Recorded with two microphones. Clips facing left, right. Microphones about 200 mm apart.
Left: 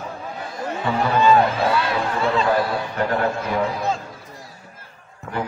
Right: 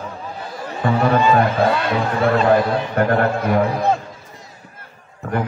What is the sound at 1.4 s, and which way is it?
Speech, 55° right (ahead or behind).